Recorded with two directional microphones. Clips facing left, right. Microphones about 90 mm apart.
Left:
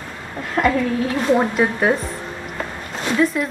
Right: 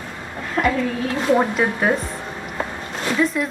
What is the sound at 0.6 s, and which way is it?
Speech, 15° left (ahead or behind).